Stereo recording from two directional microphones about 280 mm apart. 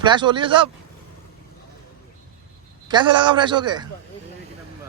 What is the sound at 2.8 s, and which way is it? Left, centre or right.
Speech, centre.